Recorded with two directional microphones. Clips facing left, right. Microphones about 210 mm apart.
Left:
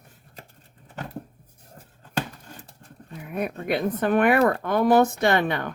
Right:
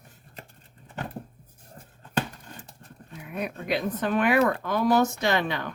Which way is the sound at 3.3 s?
55° left (ahead or behind).